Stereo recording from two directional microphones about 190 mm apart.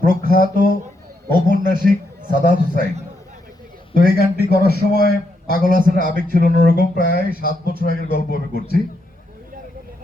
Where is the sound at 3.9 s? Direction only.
55° left (ahead or behind).